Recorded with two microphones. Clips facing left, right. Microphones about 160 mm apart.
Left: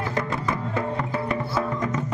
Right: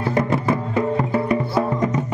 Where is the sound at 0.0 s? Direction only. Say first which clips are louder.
Right 7 dB; 30° right (ahead or behind).